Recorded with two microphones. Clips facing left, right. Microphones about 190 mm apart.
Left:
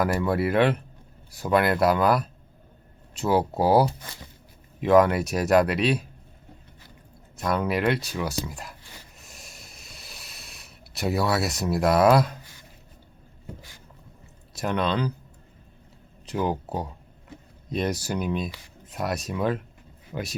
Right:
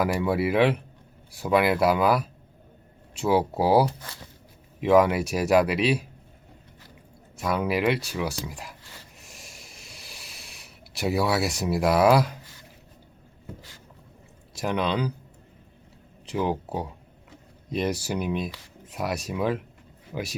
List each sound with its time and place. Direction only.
0.0 s speech: 10° right (ahead or behind)
3.8 s speech: 15° left (ahead or behind)
4.8 s speech: 10° right (ahead or behind)
7.3 s speech: 10° right (ahead or behind)
9.2 s a sound: 10° right (ahead or behind)
14.6 s speech: 10° right (ahead or behind)
16.3 s speech: centre (ahead or behind)
17.7 s speech: 10° right (ahead or behind)